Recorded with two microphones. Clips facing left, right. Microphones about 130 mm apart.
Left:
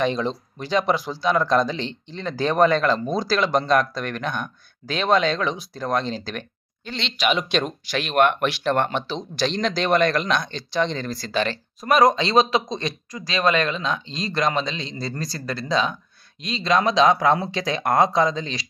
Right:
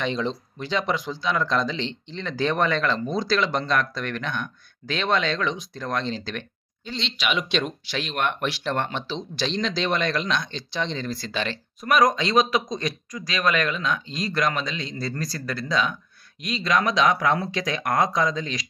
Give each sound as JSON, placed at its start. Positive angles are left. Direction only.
{"t": 0.0, "sound": "speech", "side_deg": 40}
{"t": 6.8, "sound": "speech", "side_deg": 60}
{"t": 7.2, "sound": "speech", "side_deg": 40}